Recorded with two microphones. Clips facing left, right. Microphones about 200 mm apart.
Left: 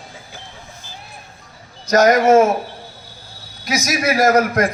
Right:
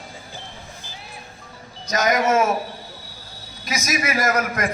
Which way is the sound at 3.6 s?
75° left (ahead or behind).